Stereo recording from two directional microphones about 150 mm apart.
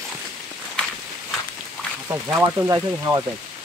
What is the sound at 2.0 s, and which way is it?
Speech, 15° right (ahead or behind).